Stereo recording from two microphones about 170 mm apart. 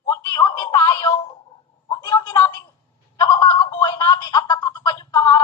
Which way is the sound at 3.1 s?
20° left (ahead or behind).